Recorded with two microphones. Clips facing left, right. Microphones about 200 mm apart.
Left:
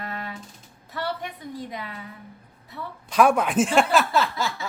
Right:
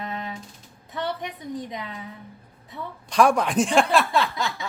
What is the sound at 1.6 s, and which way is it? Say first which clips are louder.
Female singing: left 1 dB; 20° right (ahead or behind).